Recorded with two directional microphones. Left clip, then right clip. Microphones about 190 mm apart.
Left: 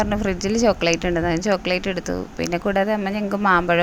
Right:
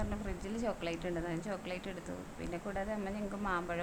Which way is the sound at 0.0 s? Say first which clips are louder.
Left 19 dB; 30° left (ahead or behind).